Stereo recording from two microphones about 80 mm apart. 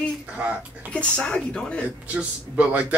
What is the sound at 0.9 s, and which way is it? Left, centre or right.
Speech, centre.